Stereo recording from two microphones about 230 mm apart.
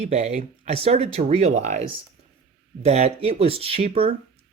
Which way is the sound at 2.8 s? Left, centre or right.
Right.